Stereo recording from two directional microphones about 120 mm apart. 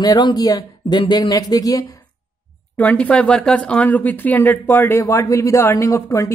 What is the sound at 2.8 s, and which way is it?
Speech, 10° left (ahead or behind).